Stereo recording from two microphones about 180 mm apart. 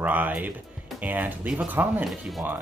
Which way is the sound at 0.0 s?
10° right (ahead or behind).